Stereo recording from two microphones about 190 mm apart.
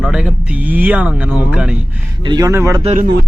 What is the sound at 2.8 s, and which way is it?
Speech, 40° right (ahead or behind).